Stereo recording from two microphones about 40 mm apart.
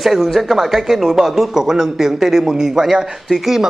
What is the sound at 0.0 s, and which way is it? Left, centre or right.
A man's voice, centre.